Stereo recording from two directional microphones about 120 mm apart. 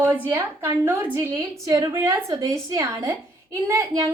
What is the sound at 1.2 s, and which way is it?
A woman's voice, 30° right (ahead or behind).